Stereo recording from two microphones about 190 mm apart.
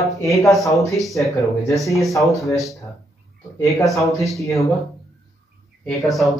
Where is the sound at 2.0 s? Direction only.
Centre (ahead or behind).